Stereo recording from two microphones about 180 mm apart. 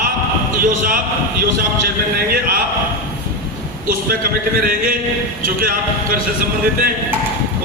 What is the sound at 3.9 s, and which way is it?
Speech, 50° right (ahead or behind).